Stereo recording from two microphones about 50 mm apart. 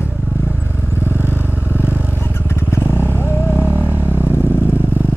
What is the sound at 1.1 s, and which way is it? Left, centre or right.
Vehicle, right.